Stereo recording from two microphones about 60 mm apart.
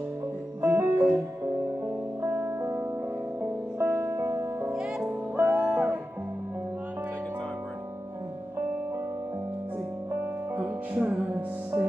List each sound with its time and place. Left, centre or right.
0.6 s music: right
5.7 s music: right
10.5 s music: right